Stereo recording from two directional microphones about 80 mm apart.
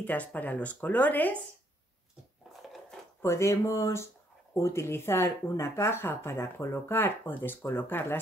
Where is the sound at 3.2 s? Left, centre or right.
Left.